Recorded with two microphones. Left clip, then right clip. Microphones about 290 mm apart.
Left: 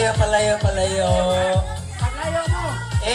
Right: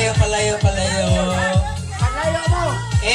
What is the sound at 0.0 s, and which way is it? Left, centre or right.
Music, centre.